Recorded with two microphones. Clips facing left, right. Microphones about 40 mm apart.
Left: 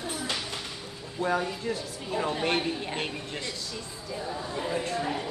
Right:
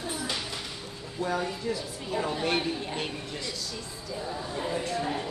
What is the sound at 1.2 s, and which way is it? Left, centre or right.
Speech, left.